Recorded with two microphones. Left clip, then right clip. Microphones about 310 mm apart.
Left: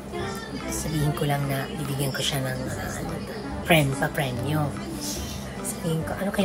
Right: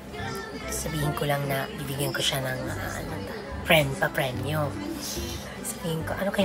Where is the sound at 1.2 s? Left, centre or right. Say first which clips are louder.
Even; centre.